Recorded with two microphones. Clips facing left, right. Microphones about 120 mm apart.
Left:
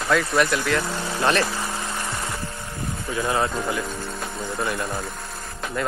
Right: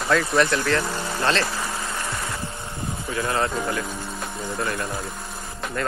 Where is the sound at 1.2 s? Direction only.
15° left (ahead or behind).